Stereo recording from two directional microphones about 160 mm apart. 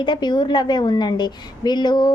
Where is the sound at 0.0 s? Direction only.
30° left (ahead or behind).